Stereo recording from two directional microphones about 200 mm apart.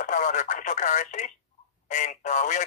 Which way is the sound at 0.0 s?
40° left (ahead or behind).